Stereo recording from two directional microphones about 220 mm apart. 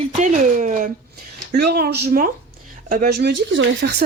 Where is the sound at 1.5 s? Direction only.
45° right (ahead or behind).